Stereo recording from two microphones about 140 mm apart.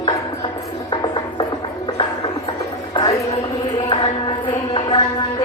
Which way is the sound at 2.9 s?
35° left (ahead or behind).